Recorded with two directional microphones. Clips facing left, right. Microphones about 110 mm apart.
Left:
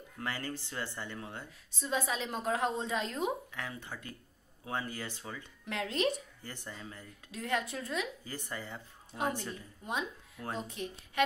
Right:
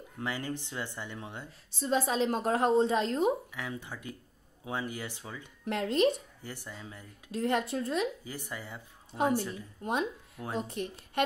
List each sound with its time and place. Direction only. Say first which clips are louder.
0.2 s speech: right 3 dB; 15° right (ahead or behind)
1.8 s a woman's voice: right 6 dB; 40° right (ahead or behind)
3.5 s speech: right 3 dB; 15° right (ahead or behind)
5.7 s a woman's voice: right 6 dB; 40° right (ahead or behind)
6.7 s speech: right 1 dB; 10° right (ahead or behind)
7.3 s a woman's voice: right 5 dB; 35° right (ahead or behind)
8.2 s speech: right 1 dB; 15° right (ahead or behind)
9.8 s a woman's voice: right 5 dB; 45° right (ahead or behind)